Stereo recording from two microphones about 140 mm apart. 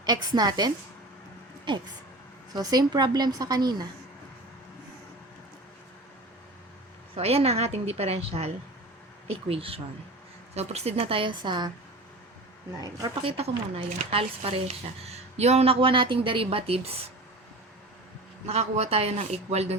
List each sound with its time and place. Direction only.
0.0 s a woman's voice: 30° right (ahead or behind)
7.2 s a woman's voice: 45° right (ahead or behind)
13.2 s a woman's voice: 45° right (ahead or behind)
18.4 s a woman's voice: 50° right (ahead or behind)